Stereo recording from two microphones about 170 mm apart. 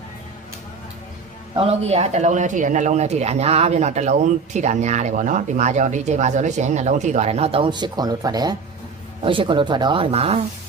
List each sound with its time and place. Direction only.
1.5 s speech: 35° right (ahead or behind)